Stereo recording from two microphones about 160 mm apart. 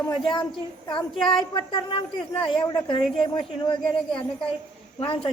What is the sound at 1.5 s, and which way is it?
A man's voice, 30° left (ahead or behind).